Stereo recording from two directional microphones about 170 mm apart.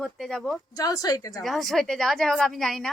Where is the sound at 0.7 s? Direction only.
20° left (ahead or behind).